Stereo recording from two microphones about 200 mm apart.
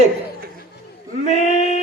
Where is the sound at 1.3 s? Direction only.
35° left (ahead or behind).